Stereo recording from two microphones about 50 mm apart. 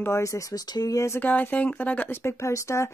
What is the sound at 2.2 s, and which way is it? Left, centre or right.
Speech, left.